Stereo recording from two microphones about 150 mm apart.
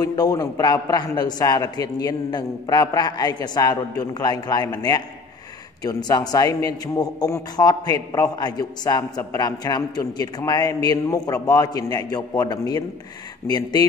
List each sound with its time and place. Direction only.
0.0 s a man's voice: 25° left (ahead or behind)